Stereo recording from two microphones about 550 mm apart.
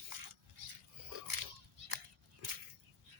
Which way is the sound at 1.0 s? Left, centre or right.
Right.